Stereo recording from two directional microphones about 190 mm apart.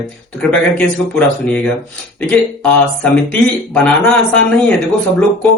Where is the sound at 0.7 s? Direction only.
5° left (ahead or behind).